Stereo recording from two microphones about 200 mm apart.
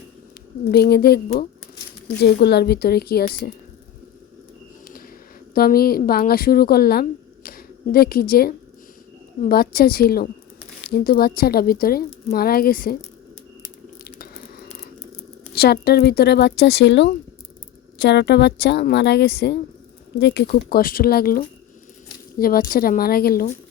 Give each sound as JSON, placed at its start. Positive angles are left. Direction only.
{"t": 0.7, "sound": "speech", "side_deg": 55}
{"t": 4.9, "sound": "a sound", "side_deg": 45}
{"t": 5.5, "sound": "a woman's voice", "side_deg": 50}
{"t": 14.0, "sound": "biting", "side_deg": 50}
{"t": 15.5, "sound": "a woman's voice", "side_deg": 50}